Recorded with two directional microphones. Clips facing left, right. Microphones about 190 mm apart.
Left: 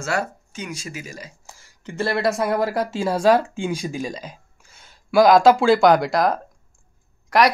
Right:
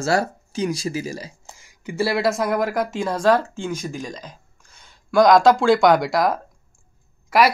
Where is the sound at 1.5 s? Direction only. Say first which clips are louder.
Right 3 dB; 15° right (ahead or behind).